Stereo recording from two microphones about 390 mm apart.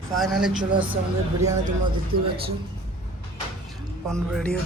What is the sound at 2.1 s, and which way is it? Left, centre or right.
Speech, right.